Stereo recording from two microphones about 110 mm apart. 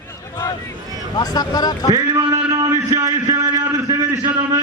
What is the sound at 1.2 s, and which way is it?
Speech, 35° left (ahead or behind).